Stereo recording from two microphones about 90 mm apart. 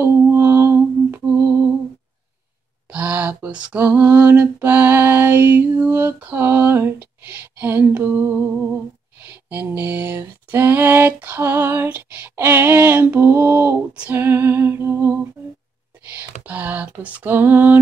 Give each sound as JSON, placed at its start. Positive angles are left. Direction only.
{"t": 0.0, "sound": "mantra", "side_deg": -25}
{"t": 2.9, "sound": "lullaby", "side_deg": -15}
{"t": 14.1, "sound": "music", "side_deg": -25}
{"t": 16.2, "sound": "a sound", "side_deg": -15}